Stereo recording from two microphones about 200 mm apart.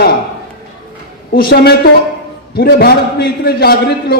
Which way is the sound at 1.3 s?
50° left (ahead or behind).